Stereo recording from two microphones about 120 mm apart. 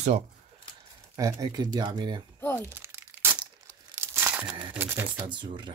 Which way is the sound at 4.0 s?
15° right (ahead or behind).